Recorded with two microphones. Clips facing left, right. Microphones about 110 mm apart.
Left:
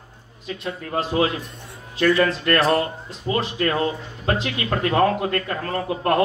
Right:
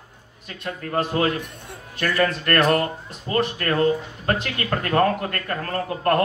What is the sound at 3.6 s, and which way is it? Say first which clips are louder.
A man's voice: right 2 dB; 50° right (ahead or behind).